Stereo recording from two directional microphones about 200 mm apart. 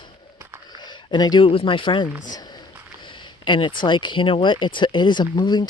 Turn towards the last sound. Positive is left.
turn(degrees=20)  # may be behind; listen again after turning